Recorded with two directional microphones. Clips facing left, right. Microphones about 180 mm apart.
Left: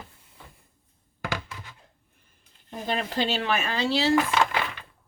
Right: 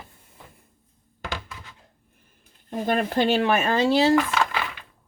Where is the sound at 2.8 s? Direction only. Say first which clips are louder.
Right 5 dB; 50° right (ahead or behind).